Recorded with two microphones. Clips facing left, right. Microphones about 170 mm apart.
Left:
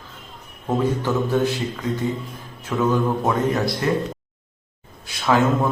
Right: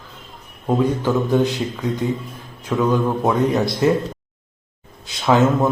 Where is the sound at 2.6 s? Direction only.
15° right (ahead or behind).